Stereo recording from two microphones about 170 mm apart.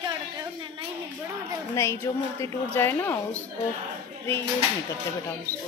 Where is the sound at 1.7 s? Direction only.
15° left (ahead or behind).